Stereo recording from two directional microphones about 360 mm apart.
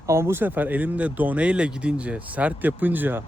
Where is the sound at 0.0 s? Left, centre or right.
Centre.